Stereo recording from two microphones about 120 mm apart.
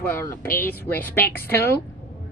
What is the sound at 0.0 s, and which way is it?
Speech, 20° left (ahead or behind).